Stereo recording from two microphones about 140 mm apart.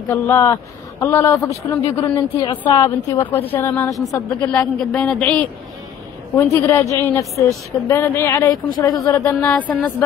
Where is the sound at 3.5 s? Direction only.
15° left (ahead or behind).